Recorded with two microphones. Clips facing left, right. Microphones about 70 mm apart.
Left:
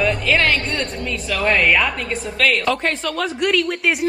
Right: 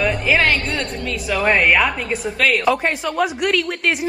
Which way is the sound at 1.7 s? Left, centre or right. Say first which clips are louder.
Right 2 dB; centre.